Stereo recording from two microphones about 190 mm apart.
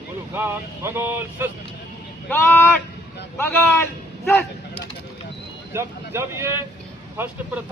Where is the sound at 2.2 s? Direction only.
10° left (ahead or behind).